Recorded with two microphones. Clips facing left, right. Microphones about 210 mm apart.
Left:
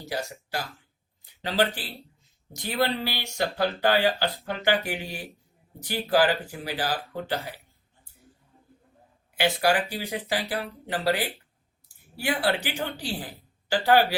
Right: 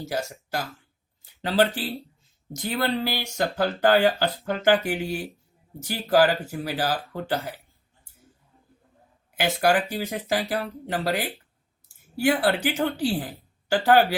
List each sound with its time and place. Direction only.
0.0 s speech: 45° right (ahead or behind)
2.6 s speech: 45° right (ahead or behind)
9.4 s speech: 45° right (ahead or behind)